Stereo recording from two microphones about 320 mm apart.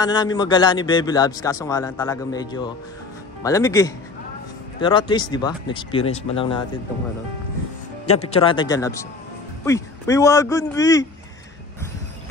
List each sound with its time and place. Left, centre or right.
0.0 s a man's voice: centre
8.1 s a man's voice: centre